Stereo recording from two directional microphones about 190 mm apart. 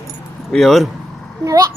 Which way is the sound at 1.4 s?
15° right (ahead or behind).